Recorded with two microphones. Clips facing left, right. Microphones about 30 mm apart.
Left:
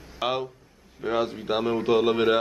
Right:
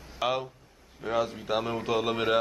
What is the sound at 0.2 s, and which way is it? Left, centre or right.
Speech, centre.